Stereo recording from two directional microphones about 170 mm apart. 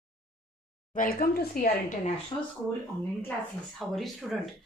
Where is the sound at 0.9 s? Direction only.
60° left (ahead or behind).